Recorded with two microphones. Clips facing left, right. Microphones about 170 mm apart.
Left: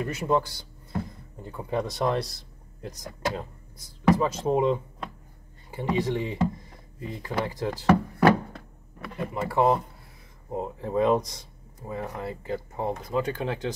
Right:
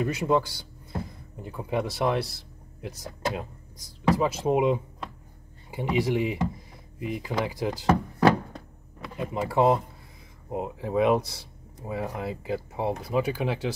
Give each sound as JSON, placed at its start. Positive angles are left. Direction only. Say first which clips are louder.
{"t": 0.0, "sound": "speech", "louder": "right 1 dB", "side_deg": -15}
{"t": 7.8, "sound": "a sound", "louder": "left 2 dB", "side_deg": -15}
{"t": 9.1, "sound": "speech", "louder": "right 1 dB", "side_deg": -15}